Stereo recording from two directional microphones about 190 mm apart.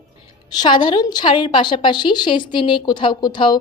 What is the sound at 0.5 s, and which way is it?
A woman's voice, 25° left (ahead or behind).